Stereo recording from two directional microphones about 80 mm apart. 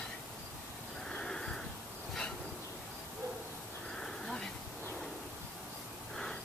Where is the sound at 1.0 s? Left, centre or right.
Centre.